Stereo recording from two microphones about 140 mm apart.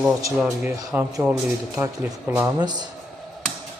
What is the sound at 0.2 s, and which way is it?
Speech, 25° right (ahead or behind).